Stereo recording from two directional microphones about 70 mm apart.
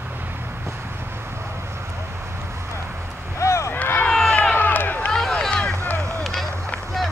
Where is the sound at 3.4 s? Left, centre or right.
Left.